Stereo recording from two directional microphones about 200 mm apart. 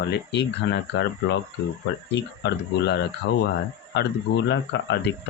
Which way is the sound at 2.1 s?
60° left (ahead or behind).